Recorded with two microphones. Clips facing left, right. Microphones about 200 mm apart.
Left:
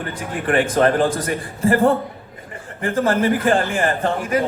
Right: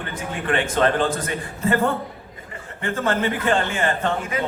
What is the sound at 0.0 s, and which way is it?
A woman's voice, 35° left (ahead or behind).